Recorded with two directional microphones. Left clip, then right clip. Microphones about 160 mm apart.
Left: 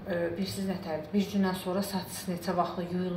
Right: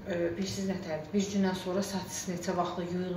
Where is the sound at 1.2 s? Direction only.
5° left (ahead or behind).